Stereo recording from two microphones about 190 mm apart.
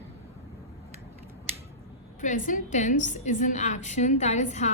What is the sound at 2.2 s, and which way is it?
A woman's voice, 45° left (ahead or behind).